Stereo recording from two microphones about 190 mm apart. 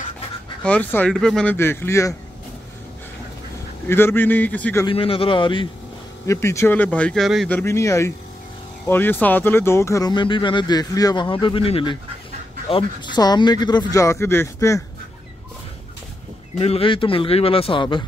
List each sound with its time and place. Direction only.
0.7 s speech: 5° left (ahead or behind)
3.8 s speech: 10° left (ahead or behind)
4.8 s speech: 30° left (ahead or behind)
6.2 s speech: 15° left (ahead or behind)
7.5 s speech: 15° left (ahead or behind)
16.5 s speech: 30° left (ahead or behind)